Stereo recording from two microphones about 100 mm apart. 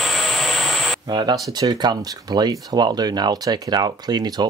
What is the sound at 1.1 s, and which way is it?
Speech, 45° right (ahead or behind).